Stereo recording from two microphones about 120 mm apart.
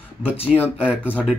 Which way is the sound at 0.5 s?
15° left (ahead or behind).